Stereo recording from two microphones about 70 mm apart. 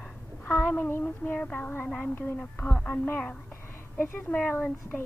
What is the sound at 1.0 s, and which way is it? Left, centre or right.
A woman's voice, left.